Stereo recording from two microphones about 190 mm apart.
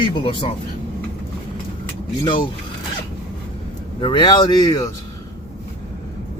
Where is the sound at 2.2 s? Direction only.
25° left (ahead or behind).